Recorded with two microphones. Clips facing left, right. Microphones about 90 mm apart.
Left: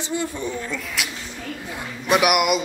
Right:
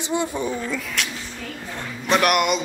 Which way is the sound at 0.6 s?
Centre (ahead or behind).